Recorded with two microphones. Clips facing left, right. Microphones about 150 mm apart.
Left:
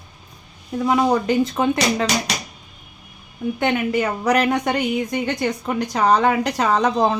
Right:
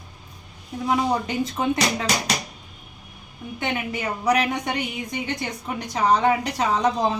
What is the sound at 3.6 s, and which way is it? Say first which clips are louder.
A woman's voice: left 7 dB; 70° left (ahead or behind).